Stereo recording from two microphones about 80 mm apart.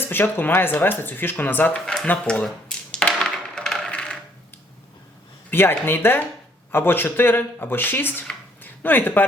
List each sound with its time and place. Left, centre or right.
0.0 s speech: left
1.7 s a sound: centre
5.5 s speech: left